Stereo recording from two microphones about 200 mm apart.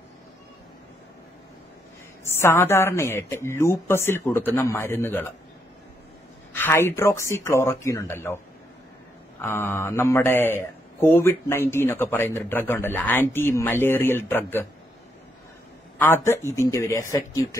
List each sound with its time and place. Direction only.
2.4 s speech: 10° left (ahead or behind)
6.5 s speech: 10° left (ahead or behind)
9.4 s speech: 10° left (ahead or behind)
16.0 s speech: 10° left (ahead or behind)